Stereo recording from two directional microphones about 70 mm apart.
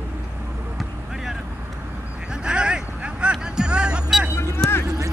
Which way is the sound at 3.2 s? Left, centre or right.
Centre.